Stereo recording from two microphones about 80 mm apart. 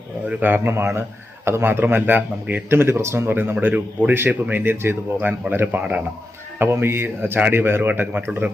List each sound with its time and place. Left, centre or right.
0.3 s a man's voice: right